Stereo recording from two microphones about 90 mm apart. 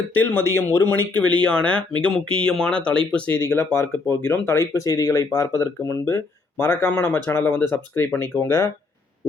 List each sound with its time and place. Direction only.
0.1 s speech: 25° left (ahead or behind)
3.5 s speech: 25° left (ahead or behind)